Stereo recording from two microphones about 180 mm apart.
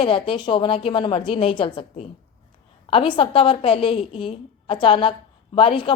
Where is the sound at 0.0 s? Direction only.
30° left (ahead or behind).